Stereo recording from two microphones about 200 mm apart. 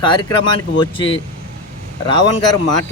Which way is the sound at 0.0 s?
25° left (ahead or behind).